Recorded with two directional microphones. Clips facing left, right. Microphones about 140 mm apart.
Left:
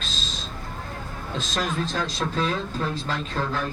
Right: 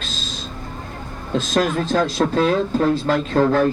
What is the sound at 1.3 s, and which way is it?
A man's voice, 50° right (ahead or behind).